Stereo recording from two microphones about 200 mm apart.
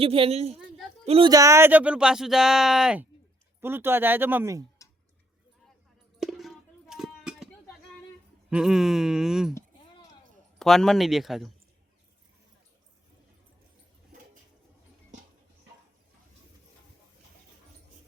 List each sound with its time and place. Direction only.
0.0 s a woman's voice: 30° right (ahead or behind)
1.3 s speech: 15° right (ahead or behind)
6.1 s a sound: centre (ahead or behind)
8.4 s speech: 5° right (ahead or behind)
10.6 s speech: centre (ahead or behind)